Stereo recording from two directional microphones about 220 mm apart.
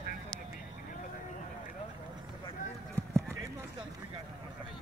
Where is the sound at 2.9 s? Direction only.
10° right (ahead or behind).